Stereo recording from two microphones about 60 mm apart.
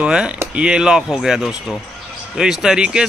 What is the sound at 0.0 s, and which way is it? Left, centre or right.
Speech, centre.